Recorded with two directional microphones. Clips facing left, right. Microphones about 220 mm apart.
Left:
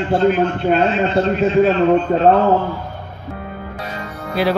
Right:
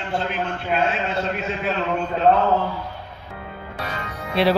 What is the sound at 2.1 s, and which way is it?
Speech, 50° left (ahead or behind).